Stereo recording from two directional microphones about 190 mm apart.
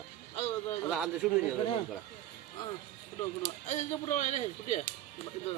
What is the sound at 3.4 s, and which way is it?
Speech, 35° left (ahead or behind).